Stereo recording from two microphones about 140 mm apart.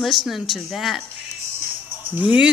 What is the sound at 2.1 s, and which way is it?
Speech, 10° right (ahead or behind).